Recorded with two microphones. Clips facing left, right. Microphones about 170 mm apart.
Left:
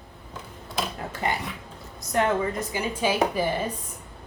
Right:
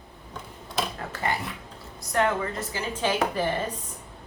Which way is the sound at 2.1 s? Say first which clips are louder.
Left 2 dB; 15° left (ahead or behind).